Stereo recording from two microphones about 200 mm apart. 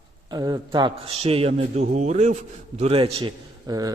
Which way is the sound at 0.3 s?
20° right (ahead or behind).